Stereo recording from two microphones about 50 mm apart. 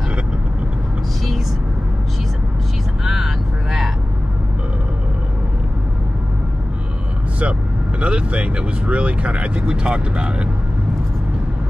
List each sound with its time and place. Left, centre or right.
3.1 s vehicle: centre
8.0 s speech: right